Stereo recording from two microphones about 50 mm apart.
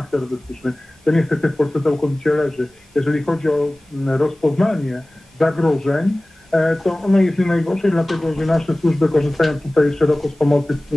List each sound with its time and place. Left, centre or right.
0.0 s speech: centre